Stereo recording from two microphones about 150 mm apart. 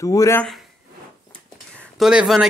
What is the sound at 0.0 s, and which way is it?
Speech, 20° left (ahead or behind).